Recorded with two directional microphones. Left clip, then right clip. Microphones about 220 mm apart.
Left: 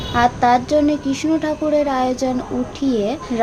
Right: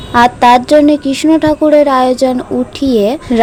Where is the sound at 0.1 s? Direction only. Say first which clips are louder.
Right 8 dB; 40° right (ahead or behind).